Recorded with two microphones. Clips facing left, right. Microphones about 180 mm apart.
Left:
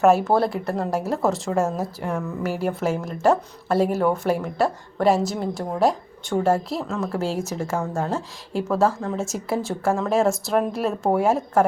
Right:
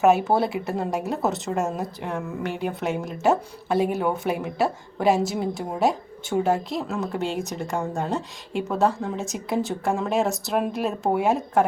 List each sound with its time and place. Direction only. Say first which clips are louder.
0.0 s speech: left 2 dB; centre (ahead or behind)